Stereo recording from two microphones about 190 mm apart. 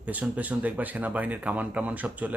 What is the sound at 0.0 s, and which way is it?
Speech, 10° right (ahead or behind).